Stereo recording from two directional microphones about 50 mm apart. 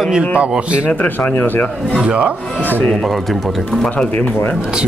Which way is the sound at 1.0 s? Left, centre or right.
Left.